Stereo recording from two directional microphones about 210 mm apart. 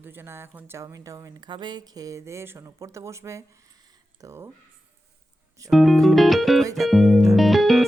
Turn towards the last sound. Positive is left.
turn(degrees=0)  # may be behind; listen again after turning